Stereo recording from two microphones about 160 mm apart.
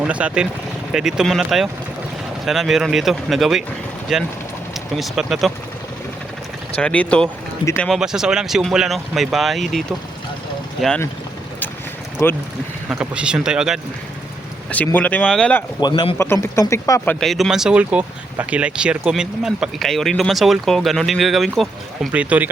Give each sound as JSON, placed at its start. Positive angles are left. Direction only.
{"t": 0.0, "sound": "speech", "side_deg": -5}
{"t": 6.7, "sound": "speech", "side_deg": 10}
{"t": 12.2, "sound": "speech", "side_deg": 15}
{"t": 12.9, "sound": "speech", "side_deg": -5}
{"t": 14.9, "sound": "speech", "side_deg": 10}
{"t": 15.8, "sound": "speech", "side_deg": 30}
{"t": 16.1, "sound": "speech", "side_deg": 15}
{"t": 17.2, "sound": "speech", "side_deg": 0}